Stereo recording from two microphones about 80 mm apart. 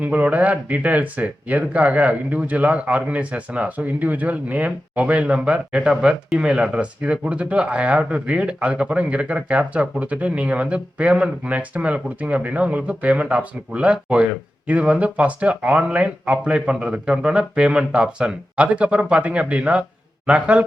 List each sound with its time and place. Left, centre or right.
0.0 s speech: centre